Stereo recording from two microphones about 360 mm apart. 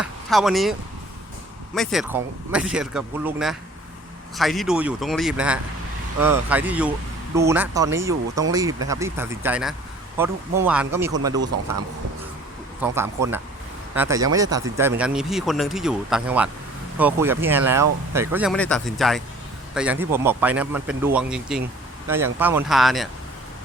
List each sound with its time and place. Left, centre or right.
0.0 s speech: centre
12.8 s speech: centre